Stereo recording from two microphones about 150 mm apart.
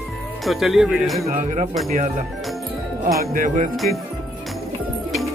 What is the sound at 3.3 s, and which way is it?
Speech, 60° right (ahead or behind).